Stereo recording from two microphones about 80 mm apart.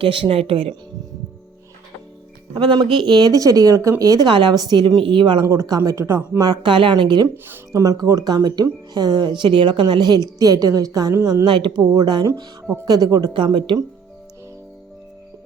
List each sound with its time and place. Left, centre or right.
0.0 s speech: right
2.6 s speech: right
4.3 s speech: right
4.5 s a woman's voice: right
5.5 s speech: right
6.4 s speech: right
7.7 s a woman's voice: right
10.3 s speech: right
11.1 s speech: right
11.4 s speech: right
11.8 s speech: right
13.3 s speech: right